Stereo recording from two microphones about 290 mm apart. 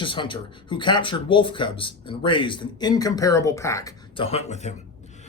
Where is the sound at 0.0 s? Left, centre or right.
Centre.